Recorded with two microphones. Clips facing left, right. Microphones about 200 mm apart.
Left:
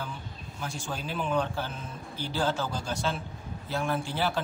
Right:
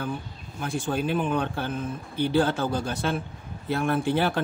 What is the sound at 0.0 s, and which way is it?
A man's voice, 55° right (ahead or behind).